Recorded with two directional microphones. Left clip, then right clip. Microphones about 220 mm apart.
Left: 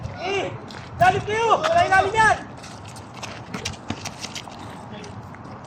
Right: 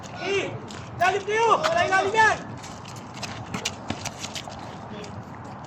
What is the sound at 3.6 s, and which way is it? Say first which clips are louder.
Clip-clop: even; 5° left (ahead or behind).